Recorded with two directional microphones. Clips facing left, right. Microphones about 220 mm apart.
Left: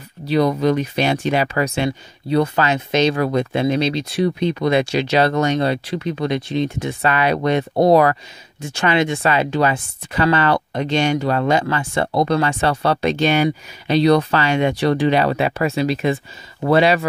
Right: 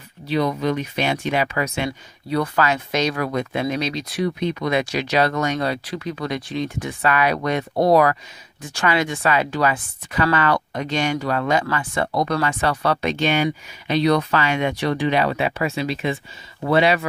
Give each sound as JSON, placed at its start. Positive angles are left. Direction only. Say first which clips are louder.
{"t": 0.3, "sound": "speech", "louder": "left 5 dB", "side_deg": 40}